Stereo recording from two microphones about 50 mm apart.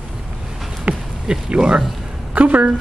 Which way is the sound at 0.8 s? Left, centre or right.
Centre.